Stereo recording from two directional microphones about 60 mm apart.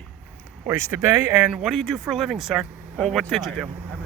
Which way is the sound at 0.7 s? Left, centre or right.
Right.